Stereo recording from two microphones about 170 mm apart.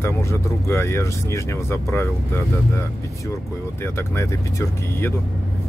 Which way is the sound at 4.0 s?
15° left (ahead or behind).